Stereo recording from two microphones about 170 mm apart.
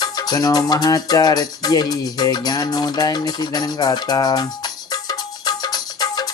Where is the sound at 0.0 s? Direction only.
25° left (ahead or behind).